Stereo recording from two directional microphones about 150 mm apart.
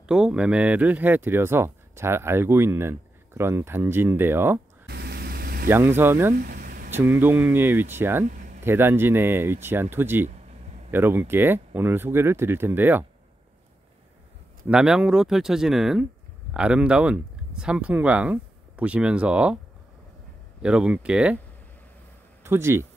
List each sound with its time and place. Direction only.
0.0 s speech: 5° right (ahead or behind)
4.8 s vehicle: 90° right
5.7 s speech: 15° right (ahead or behind)
6.3 s a sound: 70° right (ahead or behind)
6.9 s speech: 15° right (ahead or behind)
8.3 s a sound: 60° right (ahead or behind)
8.6 s speech: 15° right (ahead or behind)
14.7 s speech: 5° right (ahead or behind)
20.6 s speech: 5° right (ahead or behind)
22.4 s speech: 15° right (ahead or behind)